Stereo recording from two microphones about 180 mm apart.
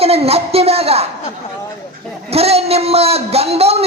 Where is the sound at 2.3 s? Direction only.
35° right (ahead or behind).